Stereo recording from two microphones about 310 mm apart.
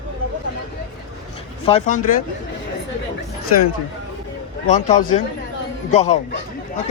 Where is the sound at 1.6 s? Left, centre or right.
Left.